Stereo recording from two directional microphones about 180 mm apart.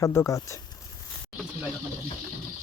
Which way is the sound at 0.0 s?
15° left (ahead or behind).